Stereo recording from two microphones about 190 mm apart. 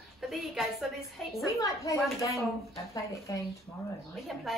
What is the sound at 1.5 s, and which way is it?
A woman's voice, 15° left (ahead or behind).